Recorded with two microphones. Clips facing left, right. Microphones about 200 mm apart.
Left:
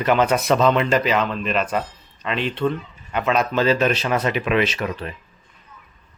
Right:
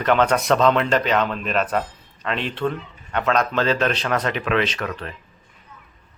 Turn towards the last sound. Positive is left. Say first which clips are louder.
# left 2 dB
turn(degrees=10)  # may be behind; listen again after turning